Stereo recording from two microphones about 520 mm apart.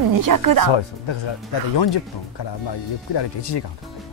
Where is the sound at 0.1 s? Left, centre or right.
Right.